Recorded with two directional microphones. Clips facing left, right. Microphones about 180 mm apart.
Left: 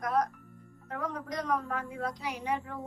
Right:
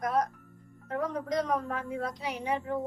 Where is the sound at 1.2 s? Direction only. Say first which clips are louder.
Right 3 dB; 20° right (ahead or behind).